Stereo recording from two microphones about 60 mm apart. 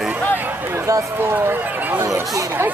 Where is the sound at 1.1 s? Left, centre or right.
Right.